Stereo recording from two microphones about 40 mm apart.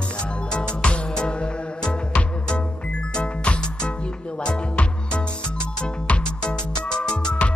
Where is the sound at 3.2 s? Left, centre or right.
Left.